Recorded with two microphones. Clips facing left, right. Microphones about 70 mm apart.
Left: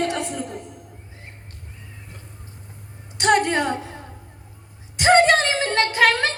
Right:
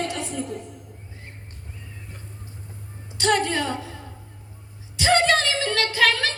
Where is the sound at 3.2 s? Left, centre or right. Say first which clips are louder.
Left 4 dB; left.